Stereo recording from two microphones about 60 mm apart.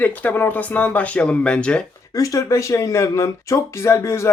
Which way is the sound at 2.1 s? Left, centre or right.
Left.